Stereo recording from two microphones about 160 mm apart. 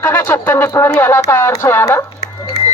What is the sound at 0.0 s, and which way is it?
Speech, 15° left (ahead or behind).